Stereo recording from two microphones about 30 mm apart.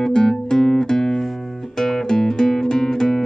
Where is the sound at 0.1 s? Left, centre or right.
Left.